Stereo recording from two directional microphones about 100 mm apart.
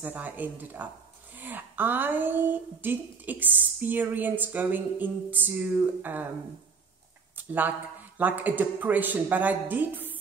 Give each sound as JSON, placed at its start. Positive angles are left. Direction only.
{"t": 0.0, "sound": "a woman's voice", "side_deg": -15}
{"t": 7.3, "sound": "a sound", "side_deg": -20}
{"t": 8.2, "sound": "a woman's voice", "side_deg": -15}